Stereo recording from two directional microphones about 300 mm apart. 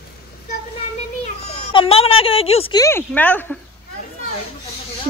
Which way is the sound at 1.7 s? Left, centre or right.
Centre.